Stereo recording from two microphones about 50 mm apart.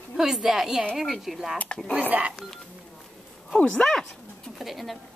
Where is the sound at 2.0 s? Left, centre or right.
Right.